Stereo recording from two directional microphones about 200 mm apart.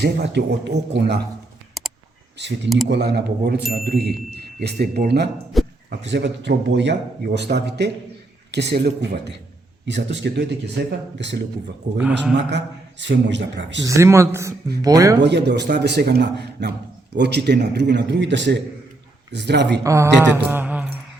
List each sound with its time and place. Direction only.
0.0 s a man's voice: 55° right (ahead or behind)
2.9 s a man's voice: 55° right (ahead or behind)
5.5 s a sound: centre (ahead or behind)
6.1 s a man's voice: 60° right (ahead or behind)
13.8 s speech: 15° right (ahead or behind)
15.2 s a man's voice: 60° right (ahead or behind)
19.8 s speech: 15° right (ahead or behind)